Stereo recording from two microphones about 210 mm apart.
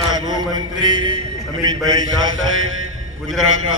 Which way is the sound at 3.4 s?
80° right.